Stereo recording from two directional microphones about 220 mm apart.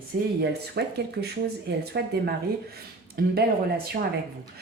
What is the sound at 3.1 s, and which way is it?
Speech, 45° right (ahead or behind).